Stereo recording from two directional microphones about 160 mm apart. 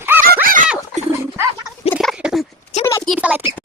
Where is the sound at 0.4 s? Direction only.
55° right (ahead or behind).